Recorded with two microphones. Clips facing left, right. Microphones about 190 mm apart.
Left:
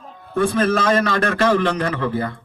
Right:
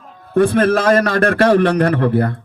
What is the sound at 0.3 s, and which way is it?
A man's voice, 60° right (ahead or behind).